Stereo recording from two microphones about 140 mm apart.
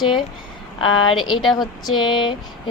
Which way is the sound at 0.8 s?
35° left (ahead or behind).